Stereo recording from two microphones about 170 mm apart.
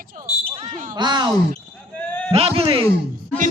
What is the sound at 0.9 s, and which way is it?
Speech, 25° right (ahead or behind).